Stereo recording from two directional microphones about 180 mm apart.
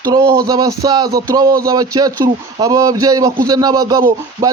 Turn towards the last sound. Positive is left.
turn(degrees=-20)  # may be behind; listen again after turning